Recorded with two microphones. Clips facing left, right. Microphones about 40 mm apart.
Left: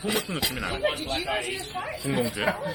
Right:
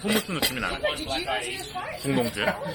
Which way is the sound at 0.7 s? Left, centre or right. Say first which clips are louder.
Left 1 dB; centre.